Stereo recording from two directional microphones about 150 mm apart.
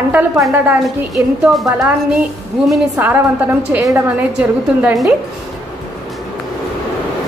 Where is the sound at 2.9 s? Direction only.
15° right (ahead or behind).